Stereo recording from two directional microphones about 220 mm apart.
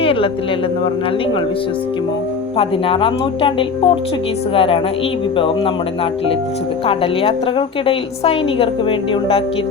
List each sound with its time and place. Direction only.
0.0 s a woman's voice: 25° left (ahead or behind)
2.6 s a woman's voice: 25° left (ahead or behind)
6.8 s a woman's voice: 25° left (ahead or behind)